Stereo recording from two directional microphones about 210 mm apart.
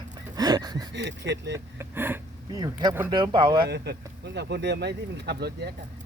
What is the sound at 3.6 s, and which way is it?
Speech, 50° right (ahead or behind).